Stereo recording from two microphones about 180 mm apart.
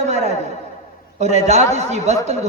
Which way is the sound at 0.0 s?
40° right (ahead or behind).